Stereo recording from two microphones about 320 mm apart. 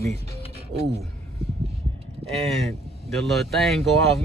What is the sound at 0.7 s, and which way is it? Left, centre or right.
Speech, centre.